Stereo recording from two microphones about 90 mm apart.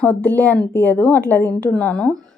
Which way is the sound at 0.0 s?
20° left (ahead or behind).